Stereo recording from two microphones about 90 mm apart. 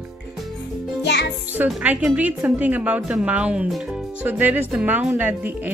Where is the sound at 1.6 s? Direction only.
15° right (ahead or behind).